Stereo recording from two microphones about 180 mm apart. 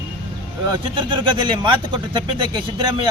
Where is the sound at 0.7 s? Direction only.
25° right (ahead or behind).